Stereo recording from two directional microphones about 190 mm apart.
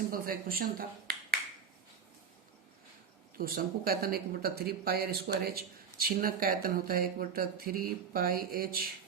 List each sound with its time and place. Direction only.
0.1 s speech: 50° right (ahead or behind)
3.3 s speech: 50° right (ahead or behind)